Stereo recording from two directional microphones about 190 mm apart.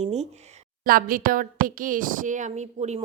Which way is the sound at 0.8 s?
50° right (ahead or behind).